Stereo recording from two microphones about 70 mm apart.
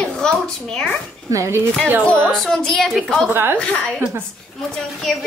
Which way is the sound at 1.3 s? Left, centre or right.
Right.